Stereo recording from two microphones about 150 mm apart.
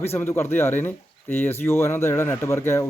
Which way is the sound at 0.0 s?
15° left (ahead or behind).